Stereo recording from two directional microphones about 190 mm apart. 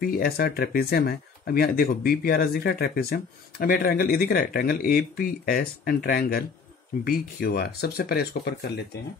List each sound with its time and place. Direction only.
0.0 s speech: 50° left (ahead or behind)